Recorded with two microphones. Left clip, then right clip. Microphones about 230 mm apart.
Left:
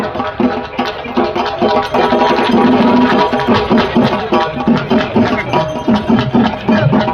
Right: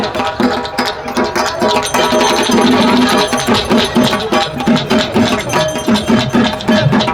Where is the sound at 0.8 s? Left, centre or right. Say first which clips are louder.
Even; centre.